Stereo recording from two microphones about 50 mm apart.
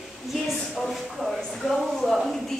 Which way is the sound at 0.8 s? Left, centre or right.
Centre.